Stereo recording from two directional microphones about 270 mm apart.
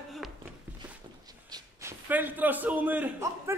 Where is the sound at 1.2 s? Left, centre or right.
Centre.